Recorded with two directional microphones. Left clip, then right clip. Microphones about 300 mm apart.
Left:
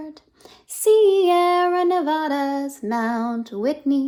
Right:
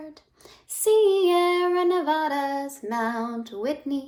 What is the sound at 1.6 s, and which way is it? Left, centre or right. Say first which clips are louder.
Female singing: left 3 dB; left.